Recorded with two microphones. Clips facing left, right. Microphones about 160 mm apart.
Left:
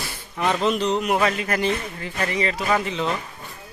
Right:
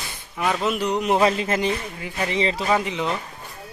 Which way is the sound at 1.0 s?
25° right (ahead or behind).